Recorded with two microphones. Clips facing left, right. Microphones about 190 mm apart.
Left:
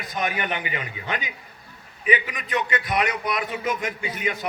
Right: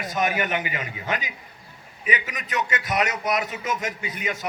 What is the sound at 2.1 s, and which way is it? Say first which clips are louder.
A man's voice: left 4 dB; 45° right (ahead or behind).